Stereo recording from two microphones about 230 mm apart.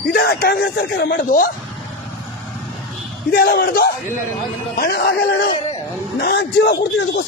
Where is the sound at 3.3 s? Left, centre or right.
Left.